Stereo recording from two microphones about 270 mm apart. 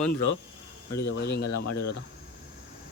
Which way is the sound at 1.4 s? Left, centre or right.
Left.